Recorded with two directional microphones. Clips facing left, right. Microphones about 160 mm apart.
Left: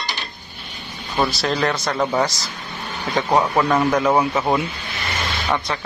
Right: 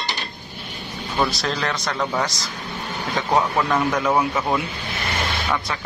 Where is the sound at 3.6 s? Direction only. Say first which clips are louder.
Left 3 dB; 10° left (ahead or behind).